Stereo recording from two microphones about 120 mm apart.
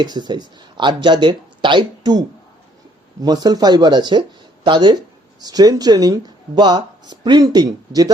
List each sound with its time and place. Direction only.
0.0 s speech: 35° right (ahead or behind)